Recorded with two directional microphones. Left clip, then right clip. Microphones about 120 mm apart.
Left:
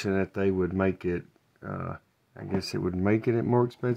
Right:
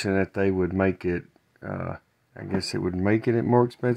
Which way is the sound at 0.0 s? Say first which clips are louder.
Right 3 dB; 35° right (ahead or behind).